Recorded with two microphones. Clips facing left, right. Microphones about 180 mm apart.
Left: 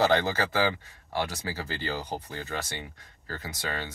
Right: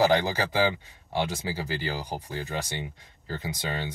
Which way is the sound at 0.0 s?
10° right (ahead or behind).